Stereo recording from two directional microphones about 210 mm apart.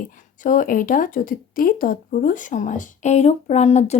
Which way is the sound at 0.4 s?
40° left (ahead or behind).